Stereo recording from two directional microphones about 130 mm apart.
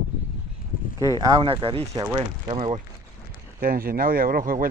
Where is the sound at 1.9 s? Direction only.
30° right (ahead or behind).